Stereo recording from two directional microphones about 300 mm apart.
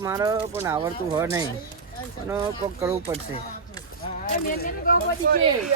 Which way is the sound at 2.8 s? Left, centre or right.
Centre.